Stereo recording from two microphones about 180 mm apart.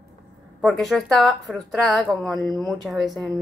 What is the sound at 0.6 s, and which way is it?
Speech, centre (ahead or behind).